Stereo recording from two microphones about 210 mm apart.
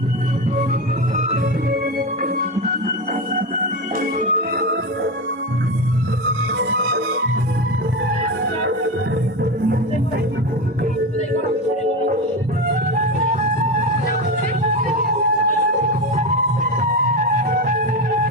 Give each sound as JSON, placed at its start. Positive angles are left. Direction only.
{"t": 1.1, "sound": "music", "side_deg": -40}
{"t": 6.6, "sound": "music", "side_deg": -60}
{"t": 17.4, "sound": "music", "side_deg": -40}